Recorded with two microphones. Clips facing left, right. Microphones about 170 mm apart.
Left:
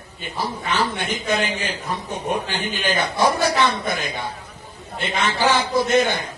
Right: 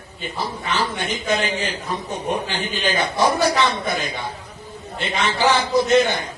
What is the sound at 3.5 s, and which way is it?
Speech, 55° left (ahead or behind).